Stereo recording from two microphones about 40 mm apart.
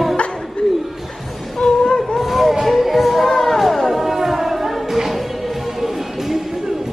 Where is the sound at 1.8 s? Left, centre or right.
Centre.